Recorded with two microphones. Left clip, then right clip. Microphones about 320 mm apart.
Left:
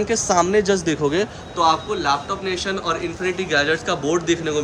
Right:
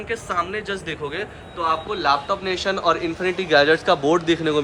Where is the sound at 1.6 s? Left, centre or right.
Centre.